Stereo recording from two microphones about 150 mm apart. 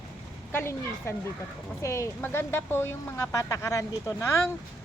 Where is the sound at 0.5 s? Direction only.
15° left (ahead or behind).